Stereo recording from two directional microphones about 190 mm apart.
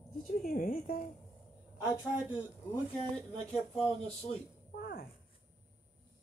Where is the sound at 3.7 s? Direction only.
5° left (ahead or behind).